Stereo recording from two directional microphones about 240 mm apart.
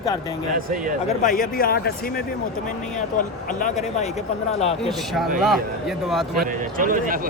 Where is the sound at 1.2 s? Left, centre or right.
Left.